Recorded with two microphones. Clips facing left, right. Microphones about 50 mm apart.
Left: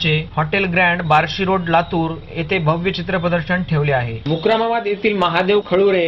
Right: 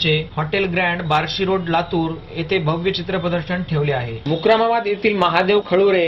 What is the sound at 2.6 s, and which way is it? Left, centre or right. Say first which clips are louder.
Speech: left 2 dB; left.